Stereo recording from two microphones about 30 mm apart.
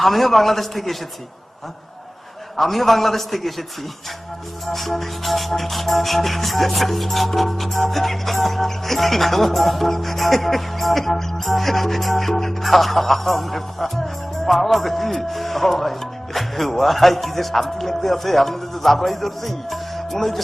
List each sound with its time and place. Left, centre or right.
0.0 s music: centre
2.6 s music: centre
4.6 s music: centre
20.1 s speech: centre